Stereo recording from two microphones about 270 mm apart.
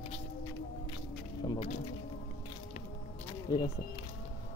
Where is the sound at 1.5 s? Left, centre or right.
Left.